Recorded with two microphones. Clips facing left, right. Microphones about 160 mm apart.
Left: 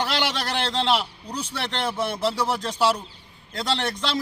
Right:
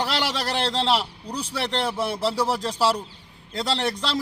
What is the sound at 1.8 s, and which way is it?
A man's voice, centre (ahead or behind).